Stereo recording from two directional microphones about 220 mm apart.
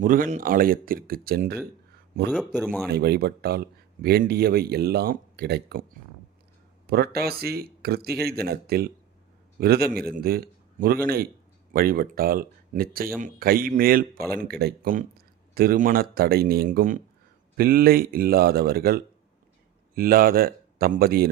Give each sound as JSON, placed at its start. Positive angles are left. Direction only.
{"t": 0.0, "sound": "speech", "side_deg": -35}
{"t": 2.3, "sound": "speech", "side_deg": 0}
{"t": 2.9, "sound": "speech", "side_deg": -45}
{"t": 6.8, "sound": "speech", "side_deg": -45}